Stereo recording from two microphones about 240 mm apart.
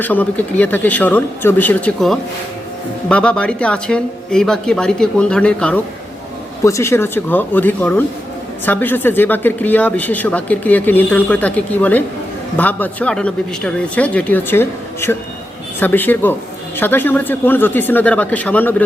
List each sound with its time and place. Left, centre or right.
0.0 s speech: centre